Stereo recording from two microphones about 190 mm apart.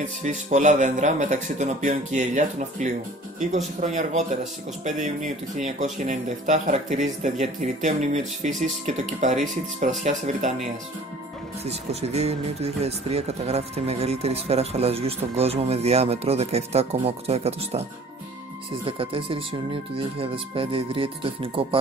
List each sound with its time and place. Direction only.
0.0 s speech: 40° right (ahead or behind)
11.6 s speech: 35° right (ahead or behind)
18.9 s speech: 30° right (ahead or behind)